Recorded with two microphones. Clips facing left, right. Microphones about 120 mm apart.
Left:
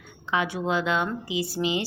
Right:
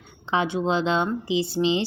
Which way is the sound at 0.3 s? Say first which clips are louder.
Right 3 dB; 25° right (ahead or behind).